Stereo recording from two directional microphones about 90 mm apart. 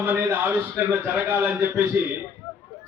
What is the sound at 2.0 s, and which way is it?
Speech, 25° right (ahead or behind).